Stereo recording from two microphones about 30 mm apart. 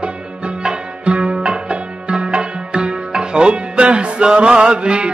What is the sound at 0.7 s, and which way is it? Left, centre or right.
Music, right.